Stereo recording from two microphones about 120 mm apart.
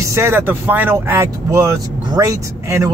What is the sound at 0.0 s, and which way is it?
Speech, 20° right (ahead or behind).